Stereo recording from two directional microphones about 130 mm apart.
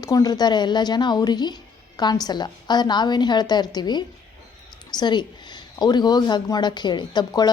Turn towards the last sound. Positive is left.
turn(degrees=35)  # may be behind; listen again after turning